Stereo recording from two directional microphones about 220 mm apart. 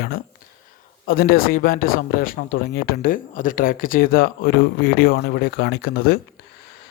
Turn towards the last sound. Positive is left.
turn(degrees=45)  # may be behind; listen again after turning